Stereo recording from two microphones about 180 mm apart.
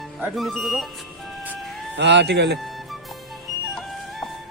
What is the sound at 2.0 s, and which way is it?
Speech, 75° right (ahead or behind).